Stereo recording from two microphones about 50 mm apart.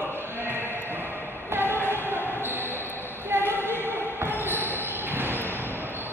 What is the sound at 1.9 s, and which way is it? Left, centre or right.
Music, right.